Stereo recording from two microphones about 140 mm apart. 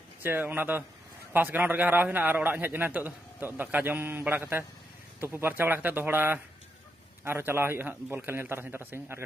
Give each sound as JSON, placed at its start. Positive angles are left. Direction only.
{"t": 0.2, "sound": "a man's voice", "side_deg": -15}